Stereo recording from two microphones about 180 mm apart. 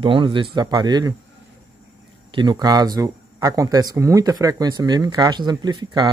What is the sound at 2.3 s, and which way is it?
Speech, 25° right (ahead or behind).